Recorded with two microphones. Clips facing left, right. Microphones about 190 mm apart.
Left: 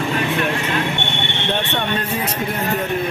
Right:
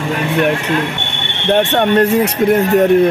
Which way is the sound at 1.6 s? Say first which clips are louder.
Right 11 dB; 75° right (ahead or behind).